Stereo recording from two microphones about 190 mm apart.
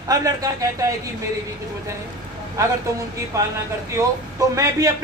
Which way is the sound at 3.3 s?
15° right (ahead or behind).